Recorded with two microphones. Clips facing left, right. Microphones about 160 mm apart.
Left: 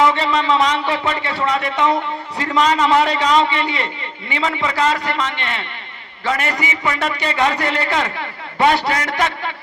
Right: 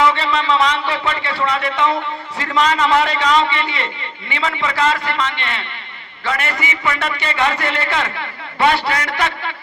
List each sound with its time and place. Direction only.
0.0 s a man's voice: 45° left (ahead or behind)